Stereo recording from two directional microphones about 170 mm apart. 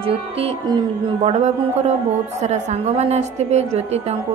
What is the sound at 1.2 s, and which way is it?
A woman's voice, 40° right (ahead or behind).